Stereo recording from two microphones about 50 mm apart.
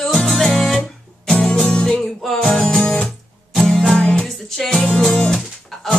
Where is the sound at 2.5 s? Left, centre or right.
Centre.